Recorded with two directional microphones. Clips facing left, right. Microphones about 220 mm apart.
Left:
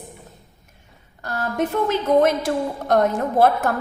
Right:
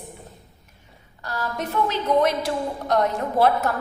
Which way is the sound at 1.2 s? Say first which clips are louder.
Left 5 dB; 50° left (ahead or behind).